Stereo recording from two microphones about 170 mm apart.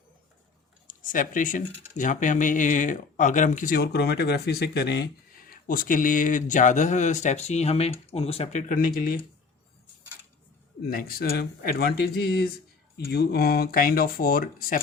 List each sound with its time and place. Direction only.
0.9 s speech: 50° left (ahead or behind); by 5.0 s 75° left (ahead or behind)
5.5 s speech: 55° left (ahead or behind); by 8.6 s 35° left (ahead or behind)
9.0 s speech: 55° left (ahead or behind)
10.8 s speech: 60° left (ahead or behind)